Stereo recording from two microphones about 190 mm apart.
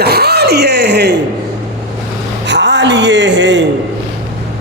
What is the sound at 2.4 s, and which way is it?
Speech, 70° right (ahead or behind).